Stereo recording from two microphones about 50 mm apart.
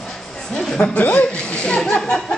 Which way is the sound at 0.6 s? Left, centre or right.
Centre.